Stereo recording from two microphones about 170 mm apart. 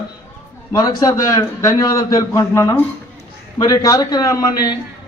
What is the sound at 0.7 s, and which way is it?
A man's voice, 20° left (ahead or behind).